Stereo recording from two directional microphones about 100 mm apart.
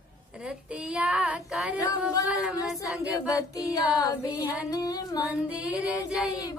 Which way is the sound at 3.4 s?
35° left (ahead or behind).